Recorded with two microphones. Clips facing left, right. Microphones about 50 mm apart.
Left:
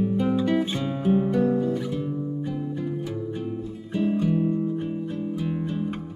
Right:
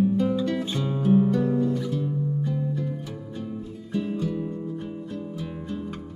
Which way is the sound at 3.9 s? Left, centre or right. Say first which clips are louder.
Left 4 dB; left.